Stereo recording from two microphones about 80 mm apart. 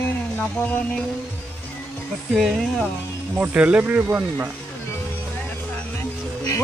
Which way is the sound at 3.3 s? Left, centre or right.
Centre.